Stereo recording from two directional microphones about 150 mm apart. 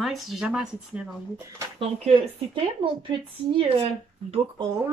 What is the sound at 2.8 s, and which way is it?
Speech, 35° right (ahead or behind).